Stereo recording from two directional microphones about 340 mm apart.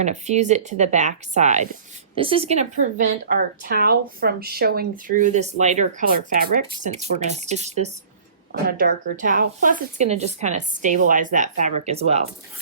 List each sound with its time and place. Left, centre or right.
0.0 s a woman's voice: centre